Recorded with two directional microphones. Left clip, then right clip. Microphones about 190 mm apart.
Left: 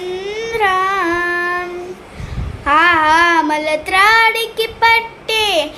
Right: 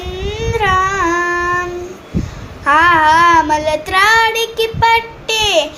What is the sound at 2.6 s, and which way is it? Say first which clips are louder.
Child singing: right 2 dB; 10° left (ahead or behind).